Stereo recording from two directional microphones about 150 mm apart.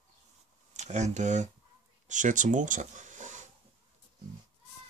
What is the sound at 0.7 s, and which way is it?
Speech, 50° right (ahead or behind).